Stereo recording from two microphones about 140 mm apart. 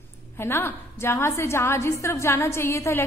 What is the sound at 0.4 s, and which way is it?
A woman's voice, 15° left (ahead or behind).